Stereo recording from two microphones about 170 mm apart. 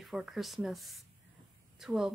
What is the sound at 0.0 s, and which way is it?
Speech, centre (ahead or behind).